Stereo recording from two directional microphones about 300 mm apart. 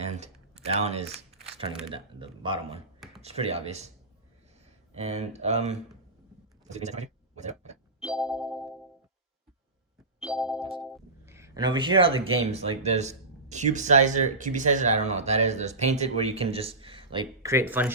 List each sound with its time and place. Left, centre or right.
0.5 s speech: right
4.9 s speech: right
6.7 s speech: right
8.0 s music: centre
10.2 s music: centre
10.8 s speech: centre